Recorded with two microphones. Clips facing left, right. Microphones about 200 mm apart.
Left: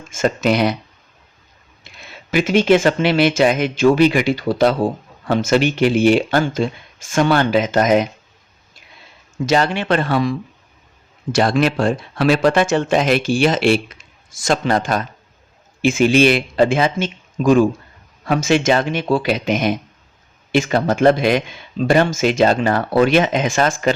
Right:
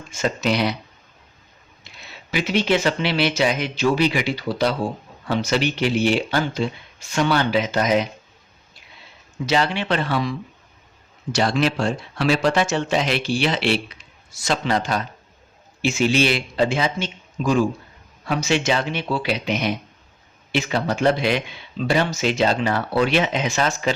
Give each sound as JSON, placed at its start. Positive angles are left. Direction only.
{"t": 0.1, "sound": "speech", "side_deg": 50}
{"t": 1.8, "sound": "speech", "side_deg": 50}
{"t": 9.5, "sound": "speech", "side_deg": 45}